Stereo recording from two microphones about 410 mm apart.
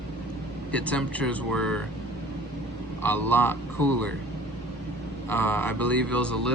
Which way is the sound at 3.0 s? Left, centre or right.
Centre.